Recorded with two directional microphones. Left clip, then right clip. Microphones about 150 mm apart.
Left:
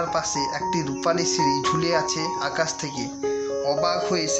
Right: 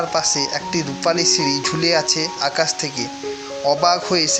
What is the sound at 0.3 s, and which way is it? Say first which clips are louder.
Speech: right 3 dB; 30° right (ahead or behind).